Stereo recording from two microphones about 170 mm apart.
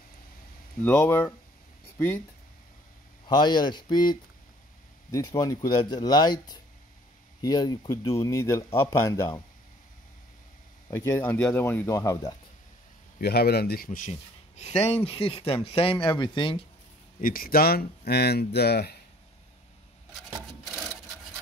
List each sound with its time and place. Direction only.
0.8 s speech: 10° left (ahead or behind)
3.3 s speech: 25° left (ahead or behind)
10.9 s speech: 15° left (ahead or behind)
13.2 s a man's voice: 70° left (ahead or behind); by 14.1 s 50° left (ahead or behind)
14.6 s speech: 40° left (ahead or behind)
17.2 s speech: 60° left (ahead or behind)
20.6 s rub: centre (ahead or behind)